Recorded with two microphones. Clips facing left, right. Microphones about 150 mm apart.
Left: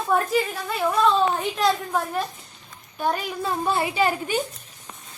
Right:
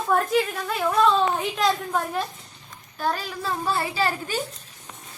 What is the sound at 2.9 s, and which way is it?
A child's voice, 15° left (ahead or behind).